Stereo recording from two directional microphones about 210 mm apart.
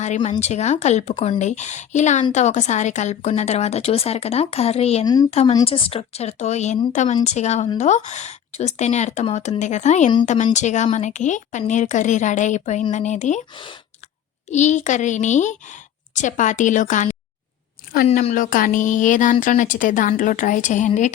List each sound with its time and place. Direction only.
0.0 s a woman's voice: 35° left (ahead or behind)
5.0 s speech: 20° left (ahead or behind)
5.3 s a woman's voice: 30° left (ahead or behind)
14.5 s a woman's voice: 35° left (ahead or behind)